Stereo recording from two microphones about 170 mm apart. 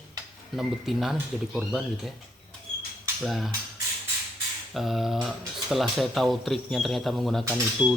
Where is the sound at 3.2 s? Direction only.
Centre (ahead or behind).